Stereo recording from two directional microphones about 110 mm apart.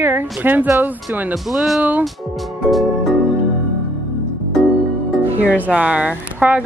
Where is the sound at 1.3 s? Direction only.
Centre (ahead or behind).